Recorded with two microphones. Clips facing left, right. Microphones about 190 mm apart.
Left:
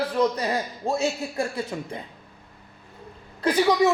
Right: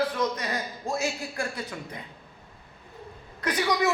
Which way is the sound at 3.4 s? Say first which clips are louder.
Left 6 dB; 30° left (ahead or behind).